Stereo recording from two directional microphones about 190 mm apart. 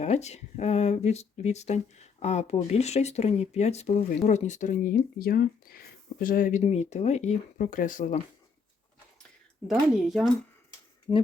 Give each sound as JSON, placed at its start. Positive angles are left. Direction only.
{"t": 0.0, "sound": "speech", "side_deg": 35}
{"t": 9.6, "sound": "speech", "side_deg": 0}
{"t": 11.1, "sound": "speech", "side_deg": 15}